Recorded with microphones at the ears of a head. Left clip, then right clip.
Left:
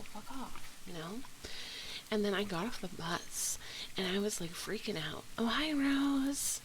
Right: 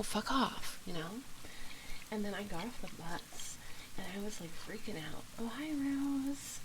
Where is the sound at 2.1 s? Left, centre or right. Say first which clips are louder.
Left 7 dB; left.